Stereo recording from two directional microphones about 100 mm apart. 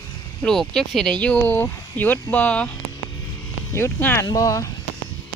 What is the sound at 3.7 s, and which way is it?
Speech, 25° left (ahead or behind).